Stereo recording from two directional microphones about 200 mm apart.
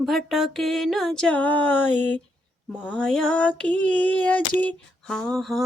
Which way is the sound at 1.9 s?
10° left (ahead or behind).